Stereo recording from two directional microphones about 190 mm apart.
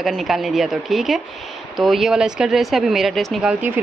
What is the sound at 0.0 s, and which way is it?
Speech, centre (ahead or behind).